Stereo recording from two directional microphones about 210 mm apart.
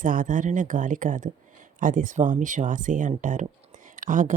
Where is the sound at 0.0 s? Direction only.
40° right (ahead or behind).